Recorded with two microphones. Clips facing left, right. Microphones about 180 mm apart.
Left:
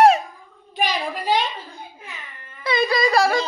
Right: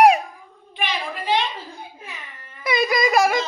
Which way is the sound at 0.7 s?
40° left (ahead or behind).